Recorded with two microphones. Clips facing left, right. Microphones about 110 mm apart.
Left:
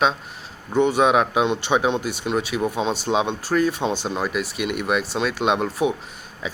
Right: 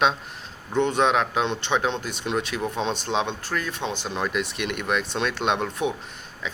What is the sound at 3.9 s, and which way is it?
Speech, 40° left (ahead or behind).